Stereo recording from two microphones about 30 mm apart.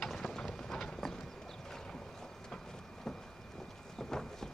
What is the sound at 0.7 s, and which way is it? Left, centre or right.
Clip-clop, centre.